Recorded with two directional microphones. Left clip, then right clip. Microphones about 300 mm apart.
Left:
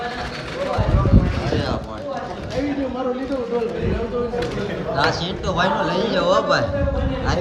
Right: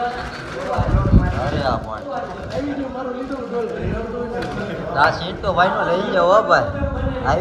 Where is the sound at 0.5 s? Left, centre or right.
Centre.